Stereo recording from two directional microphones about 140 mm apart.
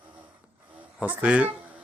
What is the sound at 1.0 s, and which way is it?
Speech, 10° right (ahead or behind).